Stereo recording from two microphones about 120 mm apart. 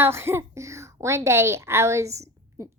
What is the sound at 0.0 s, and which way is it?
A woman's voice, 20° right (ahead or behind).